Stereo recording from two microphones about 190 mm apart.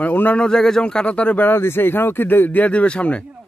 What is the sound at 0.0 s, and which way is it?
Speech, 10° left (ahead or behind).